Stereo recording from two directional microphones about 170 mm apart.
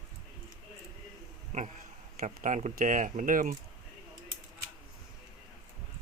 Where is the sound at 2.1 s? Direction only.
50° right (ahead or behind).